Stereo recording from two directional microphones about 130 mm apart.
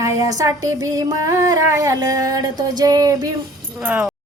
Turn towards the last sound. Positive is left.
turn(degrees=-10)  # may be behind; listen again after turning